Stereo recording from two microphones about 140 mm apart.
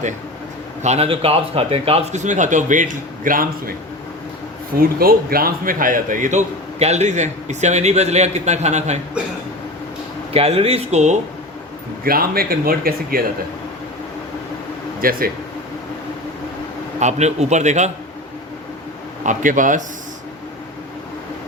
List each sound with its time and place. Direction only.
0.8 s a man's voice: 50° right (ahead or behind); by 3.8 s 85° right
4.8 s a man's voice: 90° right; by 9.0 s 55° right (ahead or behind)
10.3 s speech: 45° right (ahead or behind)
12.0 s speech: 90° right
15.0 s speech: 90° right
17.0 s a man's voice: 55° right (ahead or behind)
19.2 s speech: 65° right (ahead or behind)